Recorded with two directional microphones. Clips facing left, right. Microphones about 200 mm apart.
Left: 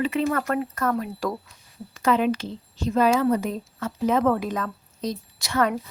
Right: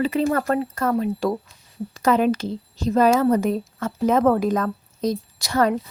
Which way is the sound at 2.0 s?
40° right (ahead or behind).